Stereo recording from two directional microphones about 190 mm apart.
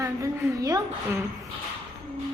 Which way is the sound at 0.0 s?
15° right (ahead or behind).